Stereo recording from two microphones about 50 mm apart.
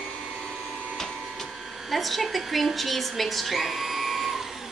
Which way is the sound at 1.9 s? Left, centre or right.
Centre.